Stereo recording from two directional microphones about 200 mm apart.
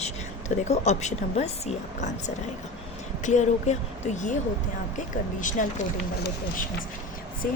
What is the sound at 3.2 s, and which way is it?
Speech, 35° left (ahead or behind).